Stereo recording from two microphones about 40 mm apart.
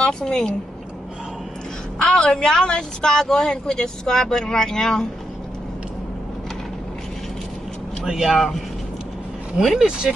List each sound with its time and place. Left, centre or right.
0.2 s speech: centre
2.0 s speech: centre
8.0 s speech: centre
9.8 s speech: centre